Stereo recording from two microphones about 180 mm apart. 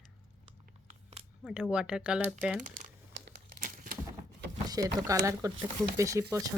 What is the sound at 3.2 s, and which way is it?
Crumpling, 60° right (ahead or behind).